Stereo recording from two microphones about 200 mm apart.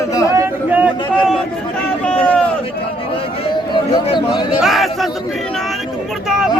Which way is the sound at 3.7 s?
25° left (ahead or behind).